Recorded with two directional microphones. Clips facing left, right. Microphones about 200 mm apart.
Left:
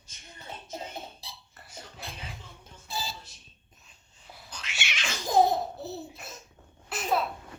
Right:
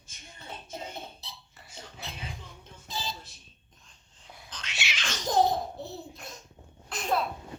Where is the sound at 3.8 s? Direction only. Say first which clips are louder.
Even; 5° left (ahead or behind).